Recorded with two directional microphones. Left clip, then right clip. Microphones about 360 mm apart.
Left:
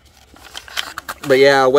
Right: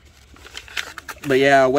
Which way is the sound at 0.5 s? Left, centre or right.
Centre.